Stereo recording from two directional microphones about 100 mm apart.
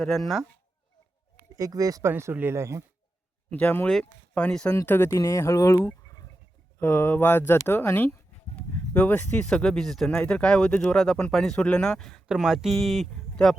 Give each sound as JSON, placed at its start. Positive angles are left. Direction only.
{"t": 0.2, "sound": "speech", "side_deg": 0}
{"t": 1.5, "sound": "speech", "side_deg": -35}
{"t": 2.0, "sound": "speech", "side_deg": -25}
{"t": 3.5, "sound": "speech", "side_deg": 15}
{"t": 4.9, "sound": "speech", "side_deg": 25}